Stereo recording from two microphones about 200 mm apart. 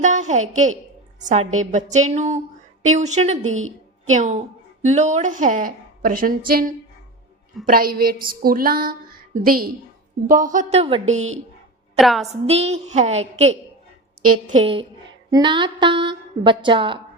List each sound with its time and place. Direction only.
0.0 s a woman's voice: 35° right (ahead or behind)
7.6 s a sound: 45° right (ahead or behind)
10.2 s a woman's voice: 40° right (ahead or behind)
11.9 s a woman's voice: centre (ahead or behind)
12.3 s a woman's voice: 30° right (ahead or behind)
14.6 s a woman's voice: 25° right (ahead or behind)